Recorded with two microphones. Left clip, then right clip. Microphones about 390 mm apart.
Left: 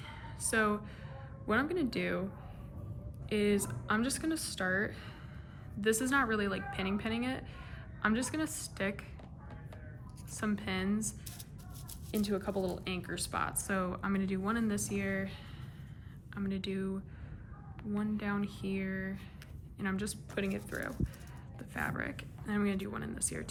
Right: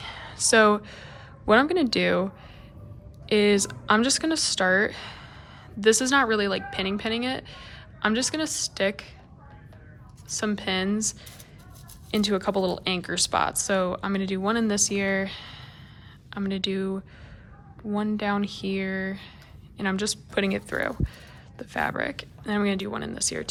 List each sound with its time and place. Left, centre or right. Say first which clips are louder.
0.0 s speech: right 14 dB; centre
3.2 s speech: right 11 dB; centre
10.3 s speech: right 10 dB; centre